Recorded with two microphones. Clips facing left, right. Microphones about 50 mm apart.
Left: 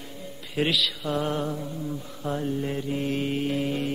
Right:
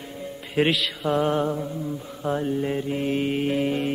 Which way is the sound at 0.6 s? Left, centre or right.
Right.